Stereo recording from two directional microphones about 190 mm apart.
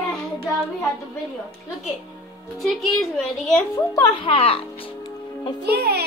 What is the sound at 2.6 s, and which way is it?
A woman's voice, centre (ahead or behind).